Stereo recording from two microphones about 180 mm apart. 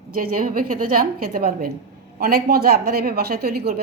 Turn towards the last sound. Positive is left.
turn(degrees=-55)  # may be behind; listen again after turning